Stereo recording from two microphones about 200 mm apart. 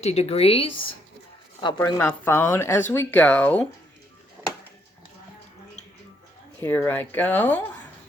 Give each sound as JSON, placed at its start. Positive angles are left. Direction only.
{"t": 0.0, "sound": "speech", "side_deg": 30}
{"t": 1.6, "sound": "speech", "side_deg": 15}
{"t": 6.6, "sound": "speech", "side_deg": 10}